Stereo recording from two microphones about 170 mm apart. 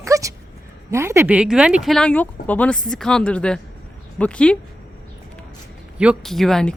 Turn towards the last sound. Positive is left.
turn(degrees=0)  # may be behind; listen again after turning